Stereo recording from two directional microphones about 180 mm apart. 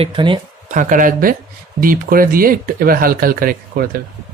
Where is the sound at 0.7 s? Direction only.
45° right (ahead or behind).